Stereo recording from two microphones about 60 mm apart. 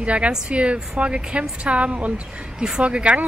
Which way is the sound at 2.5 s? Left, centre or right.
Centre.